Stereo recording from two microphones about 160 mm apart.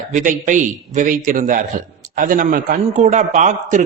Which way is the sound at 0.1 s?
55° right (ahead or behind).